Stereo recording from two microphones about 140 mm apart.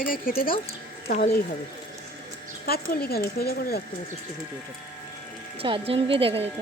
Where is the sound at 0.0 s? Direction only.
90° left.